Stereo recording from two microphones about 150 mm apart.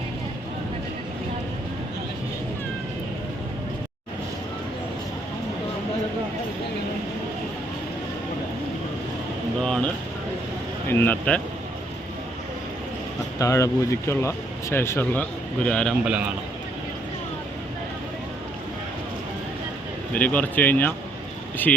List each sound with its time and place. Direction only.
9.6 s a sound: 5° left (ahead or behind)
10.8 s speech: 15° left (ahead or behind)
13.4 s speech: 20° left (ahead or behind); by 16.0 s 5° left (ahead or behind)
16.0 s a man's voice: 10° right (ahead or behind)
20.1 s speech: 10° left (ahead or behind)